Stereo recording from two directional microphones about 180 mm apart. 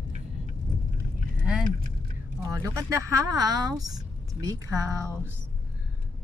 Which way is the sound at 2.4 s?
15° right (ahead or behind).